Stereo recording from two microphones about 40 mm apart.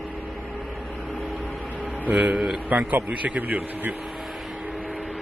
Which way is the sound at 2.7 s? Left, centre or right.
Right.